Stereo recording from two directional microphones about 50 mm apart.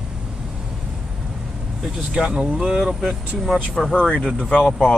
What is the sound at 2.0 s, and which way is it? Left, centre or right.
Speech, centre.